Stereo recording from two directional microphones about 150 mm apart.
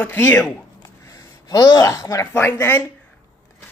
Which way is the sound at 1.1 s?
25° left (ahead or behind).